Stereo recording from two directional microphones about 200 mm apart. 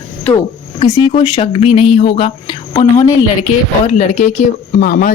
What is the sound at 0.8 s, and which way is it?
Speech, 25° left (ahead or behind).